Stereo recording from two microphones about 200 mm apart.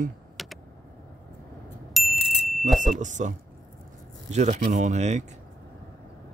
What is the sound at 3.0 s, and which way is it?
Speech, 40° right (ahead or behind).